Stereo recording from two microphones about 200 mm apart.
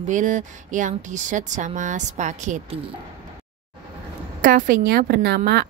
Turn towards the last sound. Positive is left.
turn(degrees=-55)  # may be behind; listen again after turning